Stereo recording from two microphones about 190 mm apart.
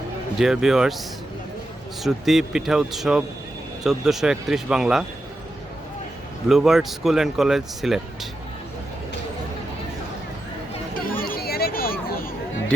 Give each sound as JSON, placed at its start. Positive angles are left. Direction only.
{"t": 0.3, "sound": "speech", "side_deg": 0}
{"t": 2.0, "sound": "speech", "side_deg": 0}
{"t": 6.5, "sound": "speech", "side_deg": 0}
{"t": 11.2, "sound": "a sound", "side_deg": 50}